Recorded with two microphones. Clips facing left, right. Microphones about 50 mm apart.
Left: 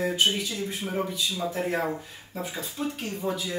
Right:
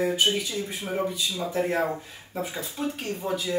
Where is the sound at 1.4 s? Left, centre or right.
Centre.